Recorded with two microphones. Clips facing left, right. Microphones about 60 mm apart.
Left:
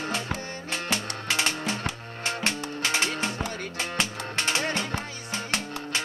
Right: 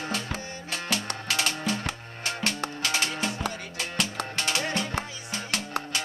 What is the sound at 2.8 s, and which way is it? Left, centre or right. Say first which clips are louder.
Music: left 3 dB; left.